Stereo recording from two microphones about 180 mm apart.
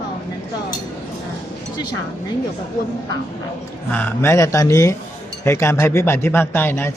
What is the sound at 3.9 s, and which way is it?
Speech, 10° left (ahead or behind).